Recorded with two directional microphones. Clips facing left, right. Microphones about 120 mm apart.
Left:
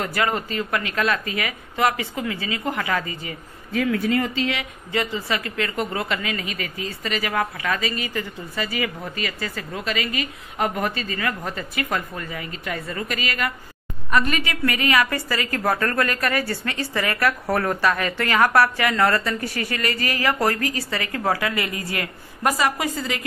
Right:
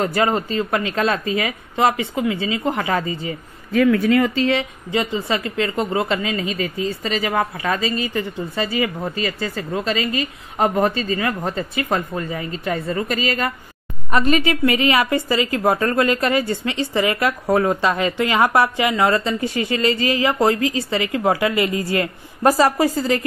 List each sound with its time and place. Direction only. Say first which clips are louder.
0.0 s speech: right 5 dB; 25° right (ahead or behind)
3.8 s speech: right 6 dB; 85° right
4.4 s speech: right 6 dB; 30° right (ahead or behind)